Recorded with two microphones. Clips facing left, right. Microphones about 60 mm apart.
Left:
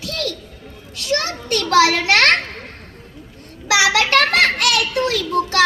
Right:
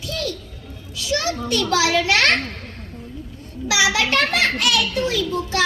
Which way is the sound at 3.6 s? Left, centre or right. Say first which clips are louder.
Left 3 dB; left.